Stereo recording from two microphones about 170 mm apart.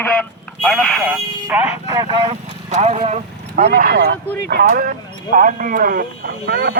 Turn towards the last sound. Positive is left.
turn(degrees=-70)  # may be behind; listen again after turning